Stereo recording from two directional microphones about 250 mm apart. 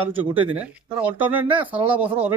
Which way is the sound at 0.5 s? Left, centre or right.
Centre.